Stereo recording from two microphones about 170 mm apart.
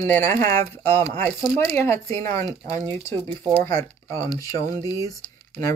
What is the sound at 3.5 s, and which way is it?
Speech, 15° left (ahead or behind).